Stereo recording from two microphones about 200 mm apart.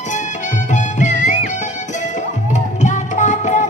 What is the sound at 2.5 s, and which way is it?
Music, 35° left (ahead or behind).